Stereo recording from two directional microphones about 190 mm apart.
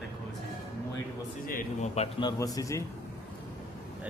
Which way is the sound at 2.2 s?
20° left (ahead or behind).